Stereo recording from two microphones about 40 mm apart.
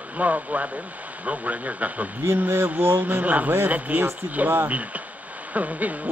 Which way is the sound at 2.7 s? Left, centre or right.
Right.